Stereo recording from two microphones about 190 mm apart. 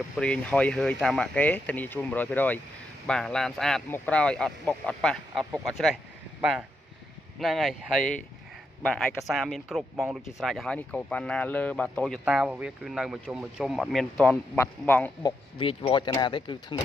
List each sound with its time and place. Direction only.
0.2 s speech: 5° left (ahead or behind)
7.3 s speech: centre (ahead or behind)
12.3 s speech: 5° right (ahead or behind); by 15.1 s 10° left (ahead or behind)
15.6 s speech: 25° left (ahead or behind)